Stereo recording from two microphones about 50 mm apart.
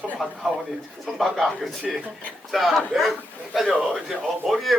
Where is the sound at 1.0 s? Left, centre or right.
Centre.